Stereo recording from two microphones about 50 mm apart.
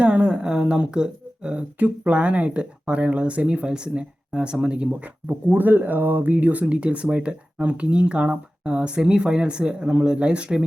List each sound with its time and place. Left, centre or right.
0.0 s speech: right
5.5 s speech: right